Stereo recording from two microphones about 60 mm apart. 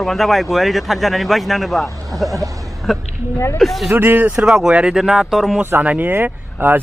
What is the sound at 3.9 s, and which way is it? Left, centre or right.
Speech, right.